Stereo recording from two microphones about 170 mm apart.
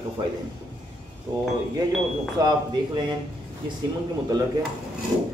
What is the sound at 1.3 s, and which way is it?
Speech, 25° right (ahead or behind).